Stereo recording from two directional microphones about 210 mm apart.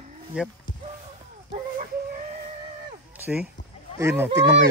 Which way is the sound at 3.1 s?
5° right (ahead or behind).